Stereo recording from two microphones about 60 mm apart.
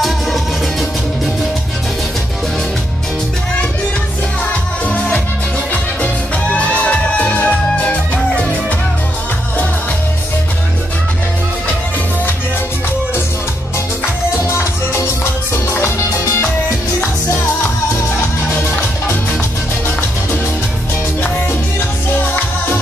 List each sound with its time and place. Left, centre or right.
0.0 s music: centre
4.8 s music: left
6.5 s music: left
14.5 s music: left